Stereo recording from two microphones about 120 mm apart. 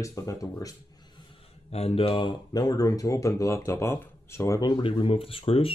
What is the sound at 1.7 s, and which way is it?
Speech, 60° left (ahead or behind).